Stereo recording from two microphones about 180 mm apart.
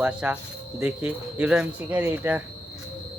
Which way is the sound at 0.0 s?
5° right (ahead or behind).